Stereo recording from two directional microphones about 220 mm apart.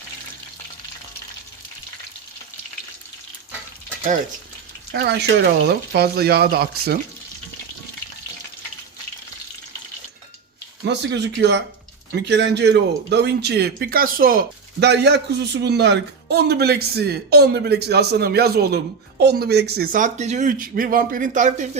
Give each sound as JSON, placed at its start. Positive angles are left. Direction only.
{"t": 4.9, "sound": "speech", "side_deg": -50}
{"t": 10.8, "sound": "speech", "side_deg": -50}